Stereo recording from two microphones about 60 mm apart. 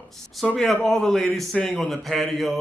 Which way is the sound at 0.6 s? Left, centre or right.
Centre.